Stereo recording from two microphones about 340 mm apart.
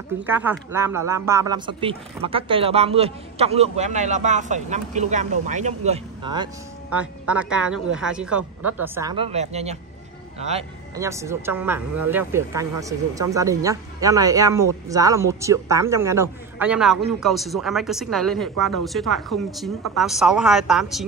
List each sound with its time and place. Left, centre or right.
0.2 s a man's voice: centre
11.0 s a man's voice: centre